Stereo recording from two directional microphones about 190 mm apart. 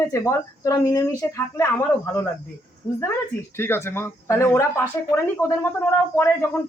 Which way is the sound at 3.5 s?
10° left (ahead or behind).